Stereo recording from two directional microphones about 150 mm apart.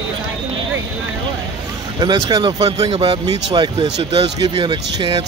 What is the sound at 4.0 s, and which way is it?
Speech, 40° right (ahead or behind).